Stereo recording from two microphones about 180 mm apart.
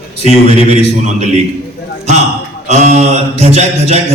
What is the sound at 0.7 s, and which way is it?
Mantra, 35° right (ahead or behind).